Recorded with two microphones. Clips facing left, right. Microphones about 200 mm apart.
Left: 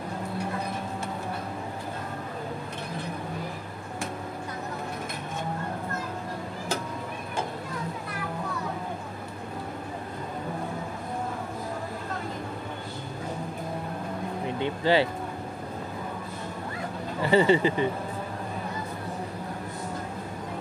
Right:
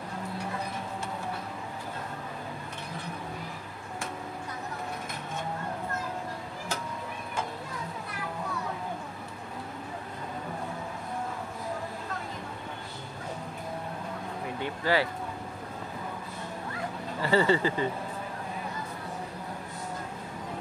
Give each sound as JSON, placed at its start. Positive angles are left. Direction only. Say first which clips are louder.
{"t": 14.6, "sound": "vehicle", "louder": "left 4 dB", "side_deg": 25}
{"t": 17.2, "sound": "speech", "louder": "left 4 dB", "side_deg": 20}